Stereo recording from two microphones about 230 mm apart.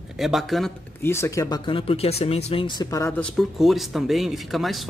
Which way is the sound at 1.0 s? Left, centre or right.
Centre.